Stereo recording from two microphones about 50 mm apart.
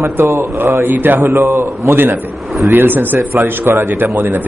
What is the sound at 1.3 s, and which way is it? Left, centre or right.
Speech, right.